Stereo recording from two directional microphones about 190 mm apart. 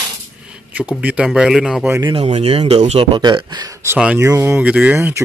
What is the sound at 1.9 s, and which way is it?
Speech, 25° right (ahead or behind).